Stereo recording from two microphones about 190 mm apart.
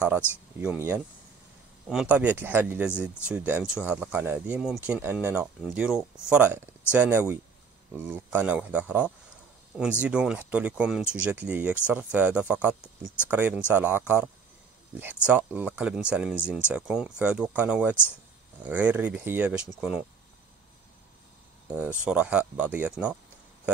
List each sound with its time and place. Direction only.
0.2 s speech: 10° left (ahead or behind)
0.6 s speech: 5° right (ahead or behind)
21.7 s speech: 5° right (ahead or behind)